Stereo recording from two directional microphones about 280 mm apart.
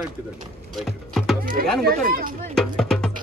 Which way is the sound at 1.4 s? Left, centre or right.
Right.